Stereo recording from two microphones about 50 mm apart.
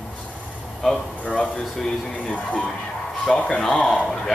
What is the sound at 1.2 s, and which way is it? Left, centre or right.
Speech, left.